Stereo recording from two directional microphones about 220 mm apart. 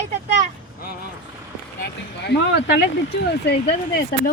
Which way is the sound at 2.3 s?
50° left (ahead or behind).